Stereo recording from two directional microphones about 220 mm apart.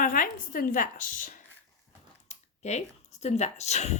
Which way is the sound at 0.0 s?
40° left (ahead or behind).